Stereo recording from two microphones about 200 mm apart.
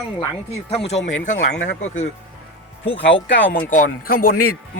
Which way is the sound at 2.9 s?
65° left (ahead or behind).